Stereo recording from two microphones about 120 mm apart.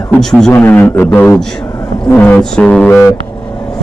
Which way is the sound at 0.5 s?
15° left (ahead or behind).